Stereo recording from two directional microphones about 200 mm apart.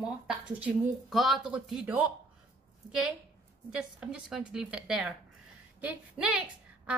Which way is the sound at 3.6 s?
5° right (ahead or behind).